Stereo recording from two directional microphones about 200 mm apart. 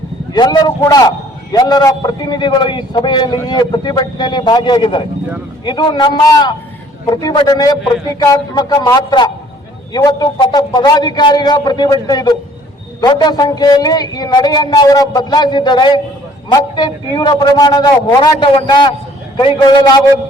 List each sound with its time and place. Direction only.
0.3 s a man's voice: 20° left (ahead or behind)